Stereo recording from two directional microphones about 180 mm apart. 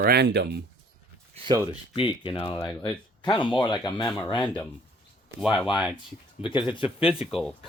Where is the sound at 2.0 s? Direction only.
30° left (ahead or behind).